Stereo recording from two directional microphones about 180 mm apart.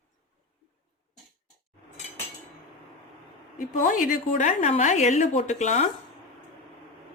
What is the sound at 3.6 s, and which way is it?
A woman's voice, 45° left (ahead or behind).